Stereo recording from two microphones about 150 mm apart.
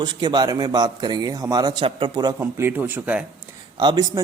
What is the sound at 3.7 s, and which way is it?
Speech, 25° right (ahead or behind).